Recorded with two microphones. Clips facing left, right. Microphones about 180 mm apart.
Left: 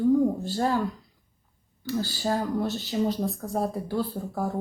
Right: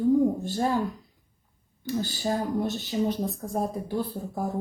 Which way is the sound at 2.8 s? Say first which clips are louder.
Left 1 dB; 20° right (ahead or behind).